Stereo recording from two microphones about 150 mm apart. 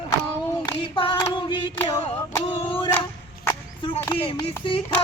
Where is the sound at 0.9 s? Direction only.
35° left (ahead or behind).